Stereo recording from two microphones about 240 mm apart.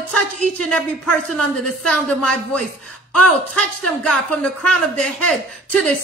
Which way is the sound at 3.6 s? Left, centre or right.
Centre.